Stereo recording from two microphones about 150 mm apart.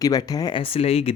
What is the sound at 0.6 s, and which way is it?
Speech, 40° left (ahead or behind).